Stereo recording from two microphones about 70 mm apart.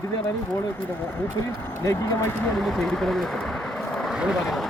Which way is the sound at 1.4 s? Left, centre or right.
Left.